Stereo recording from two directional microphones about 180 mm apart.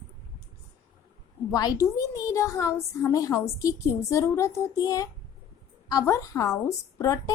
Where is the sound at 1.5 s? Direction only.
20° left (ahead or behind).